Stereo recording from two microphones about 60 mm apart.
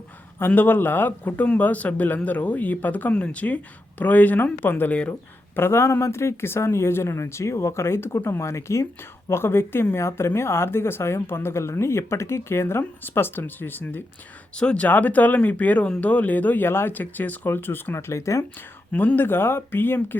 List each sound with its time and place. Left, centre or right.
0.3 s speech: left
5.5 s speech: left
9.3 s speech: left
14.5 s speech: centre
14.8 s speech: left
17.9 s speech: left
18.9 s speech: left